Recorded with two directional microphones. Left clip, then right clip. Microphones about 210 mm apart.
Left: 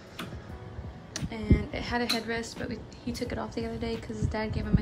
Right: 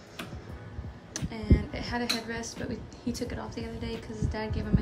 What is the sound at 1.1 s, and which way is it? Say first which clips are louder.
A woman's voice: left 1 dB; 10° right (ahead or behind).